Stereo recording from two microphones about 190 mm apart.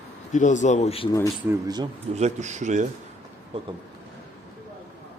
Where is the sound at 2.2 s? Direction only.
35° right (ahead or behind).